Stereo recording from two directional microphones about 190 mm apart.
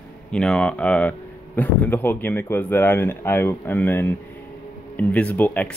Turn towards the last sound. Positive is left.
turn(degrees=10)  # may be behind; listen again after turning